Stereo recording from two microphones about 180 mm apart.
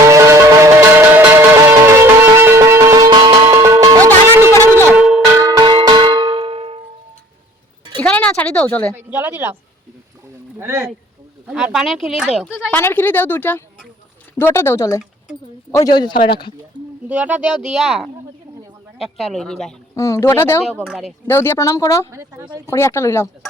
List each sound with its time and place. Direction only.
0.0 s music: 15° right (ahead or behind)
4.9 s a sound: 5° right (ahead or behind)
5.4 s a sound: 20° right (ahead or behind)
8.0 s a sound: 5° left (ahead or behind)
8.9 s a woman's voice: 10° right (ahead or behind)
10.6 s a woman's voice: 15° right (ahead or behind)
12.7 s a man's voice: 10° left (ahead or behind)
16.7 s a sound: 25° left (ahead or behind)
17.1 s speech: 10° right (ahead or behind)
20.0 s speech: 15° left (ahead or behind)
20.7 s speech: 5° right (ahead or behind)
21.2 s speech: 10° left (ahead or behind)
22.1 s a woman's voice: 15° right (ahead or behind)
22.6 s speech: 15° left (ahead or behind)